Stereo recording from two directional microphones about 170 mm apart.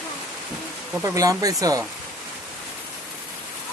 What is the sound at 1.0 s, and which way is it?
Speech, 20° right (ahead or behind).